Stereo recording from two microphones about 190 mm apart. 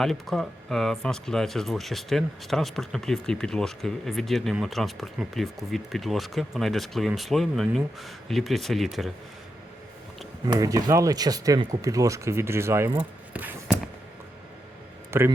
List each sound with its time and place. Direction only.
0.0 s speech: centre (ahead or behind)
10.6 s speech: 20° right (ahead or behind)
15.1 s speech: 15° right (ahead or behind)